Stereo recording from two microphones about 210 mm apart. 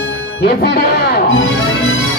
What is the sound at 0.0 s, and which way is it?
Speech, 55° left (ahead or behind).